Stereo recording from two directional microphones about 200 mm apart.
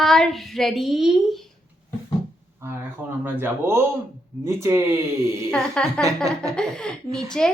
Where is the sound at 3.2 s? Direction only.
10° right (ahead or behind).